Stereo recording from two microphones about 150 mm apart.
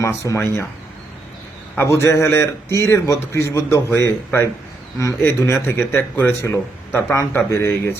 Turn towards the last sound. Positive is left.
turn(degrees=15)  # may be behind; listen again after turning